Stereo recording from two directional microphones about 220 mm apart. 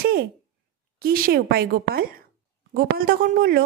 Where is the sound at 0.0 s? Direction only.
45° right (ahead or behind).